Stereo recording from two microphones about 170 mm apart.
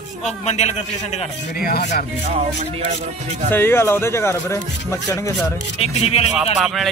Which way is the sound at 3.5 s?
15° left (ahead or behind).